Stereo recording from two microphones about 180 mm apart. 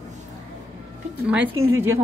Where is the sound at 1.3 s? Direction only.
10° right (ahead or behind).